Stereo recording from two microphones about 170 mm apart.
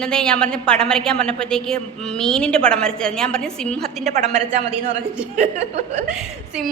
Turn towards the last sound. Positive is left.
turn(degrees=-5)  # may be behind; listen again after turning